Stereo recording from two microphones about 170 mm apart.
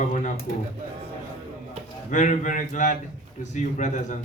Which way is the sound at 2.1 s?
45° left (ahead or behind).